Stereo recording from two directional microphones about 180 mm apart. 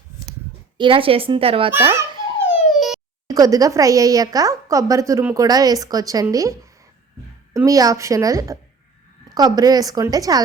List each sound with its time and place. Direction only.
0.8 s a woman's voice: 30° right (ahead or behind)
1.7 s a woman's voice: 15° right (ahead or behind)
2.4 s a sound: 5° right (ahead or behind)
3.2 s a woman's voice: 20° right (ahead or behind)
7.5 s a woman's voice: 20° right (ahead or behind)